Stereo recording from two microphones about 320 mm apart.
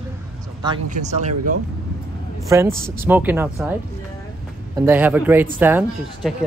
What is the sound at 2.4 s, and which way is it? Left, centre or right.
A woman's voice, centre.